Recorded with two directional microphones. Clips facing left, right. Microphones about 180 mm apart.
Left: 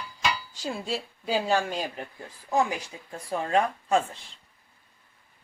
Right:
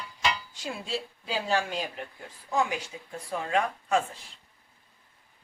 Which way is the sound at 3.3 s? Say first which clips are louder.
Left 3 dB; 35° left (ahead or behind).